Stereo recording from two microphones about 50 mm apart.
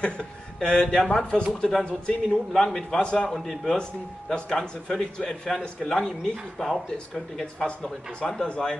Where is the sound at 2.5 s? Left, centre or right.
Centre.